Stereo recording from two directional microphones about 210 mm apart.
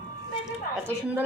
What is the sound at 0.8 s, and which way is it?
Speech, 10° right (ahead or behind).